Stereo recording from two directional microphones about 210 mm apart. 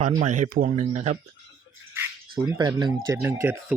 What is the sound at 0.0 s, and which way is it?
Speech, 35° right (ahead or behind).